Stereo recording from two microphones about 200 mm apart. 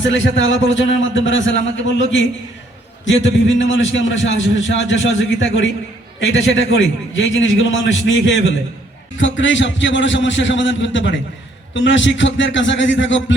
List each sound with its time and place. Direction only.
0.0 s a man's voice: 70° left (ahead or behind)